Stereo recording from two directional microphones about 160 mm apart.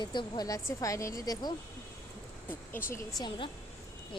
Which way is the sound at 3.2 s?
30° left (ahead or behind).